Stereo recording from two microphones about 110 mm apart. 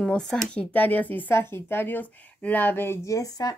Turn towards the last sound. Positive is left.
turn(degrees=35)  # may be behind; listen again after turning